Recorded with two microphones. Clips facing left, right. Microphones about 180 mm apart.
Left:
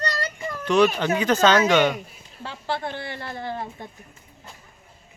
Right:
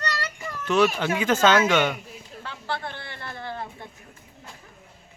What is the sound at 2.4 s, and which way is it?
Speech, 20° left (ahead or behind).